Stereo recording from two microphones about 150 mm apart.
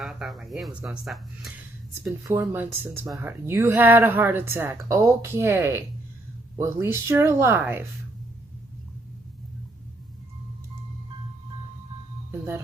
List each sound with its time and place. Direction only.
0.0 s speech: centre (ahead or behind)
2.2 s speech: 15° right (ahead or behind)